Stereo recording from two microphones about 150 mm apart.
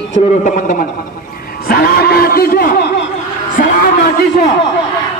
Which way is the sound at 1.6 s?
90° left.